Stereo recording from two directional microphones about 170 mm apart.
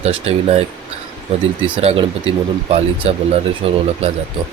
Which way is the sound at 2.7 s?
35° right (ahead or behind).